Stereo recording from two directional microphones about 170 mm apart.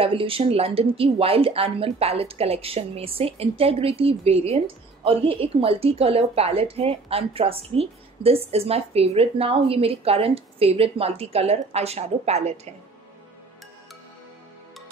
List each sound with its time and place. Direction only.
0.0 s a woman's voice: 35° right (ahead or behind)